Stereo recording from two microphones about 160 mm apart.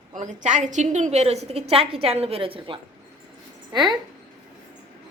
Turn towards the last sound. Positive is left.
turn(degrees=-25)  # may be behind; listen again after turning